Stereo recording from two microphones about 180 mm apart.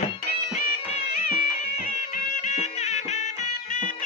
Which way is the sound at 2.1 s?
45° left (ahead or behind).